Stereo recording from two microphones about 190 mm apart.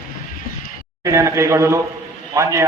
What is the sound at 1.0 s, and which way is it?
Speech, 15° right (ahead or behind).